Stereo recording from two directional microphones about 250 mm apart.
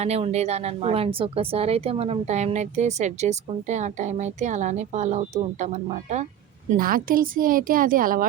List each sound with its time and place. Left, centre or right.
0.0 s speech: right